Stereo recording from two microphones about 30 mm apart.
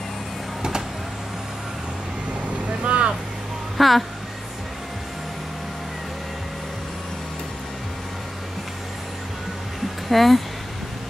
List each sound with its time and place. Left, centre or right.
0.6 s vehicle: right
2.4 s vehicle: right
3.7 s speech: centre
10.0 s speech: centre